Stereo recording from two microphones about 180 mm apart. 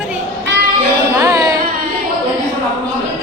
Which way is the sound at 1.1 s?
15° right (ahead or behind).